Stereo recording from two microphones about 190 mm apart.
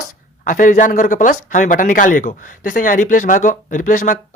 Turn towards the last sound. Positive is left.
turn(degrees=45)  # may be behind; listen again after turning